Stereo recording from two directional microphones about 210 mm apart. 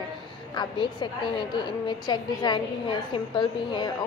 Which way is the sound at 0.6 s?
20° left (ahead or behind).